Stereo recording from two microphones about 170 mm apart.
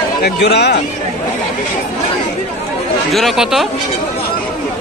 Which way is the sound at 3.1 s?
Centre (ahead or behind).